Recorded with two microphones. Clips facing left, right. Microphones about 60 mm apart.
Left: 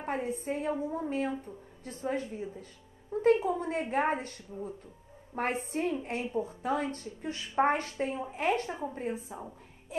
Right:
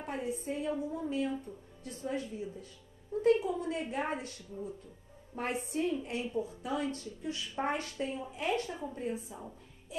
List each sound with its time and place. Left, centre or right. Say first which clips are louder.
0.0 s speech: left 3 dB; left
1.3 s speech: left 1 dB; left
1.9 s speech: left 3 dB; left